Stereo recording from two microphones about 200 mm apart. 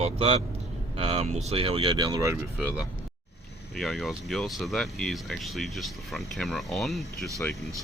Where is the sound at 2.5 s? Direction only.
5° right (ahead or behind).